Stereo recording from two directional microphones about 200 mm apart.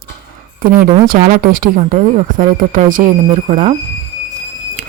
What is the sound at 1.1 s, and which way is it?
A woman's voice, 45° right (ahead or behind).